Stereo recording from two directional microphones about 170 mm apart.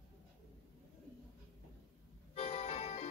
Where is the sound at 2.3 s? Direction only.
40° left (ahead or behind).